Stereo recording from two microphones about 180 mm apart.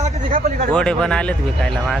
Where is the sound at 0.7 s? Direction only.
5° left (ahead or behind).